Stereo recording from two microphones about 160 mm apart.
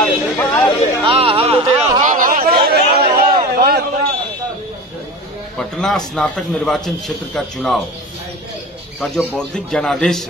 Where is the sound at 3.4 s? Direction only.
75° right (ahead or behind).